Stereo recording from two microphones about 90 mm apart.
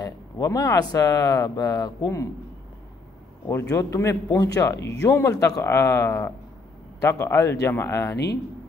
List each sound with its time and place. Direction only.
0.0 s speech: 40° left (ahead or behind)
3.4 s a man's voice: 35° left (ahead or behind)